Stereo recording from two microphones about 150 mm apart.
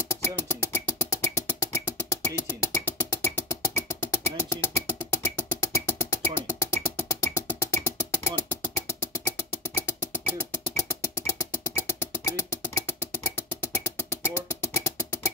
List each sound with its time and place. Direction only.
0.1 s music: 15° left (ahead or behind)